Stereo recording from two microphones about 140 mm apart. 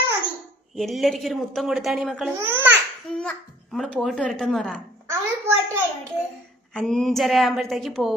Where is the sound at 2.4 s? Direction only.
15° right (ahead or behind).